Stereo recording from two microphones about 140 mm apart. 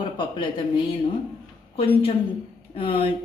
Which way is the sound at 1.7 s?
40° left (ahead or behind).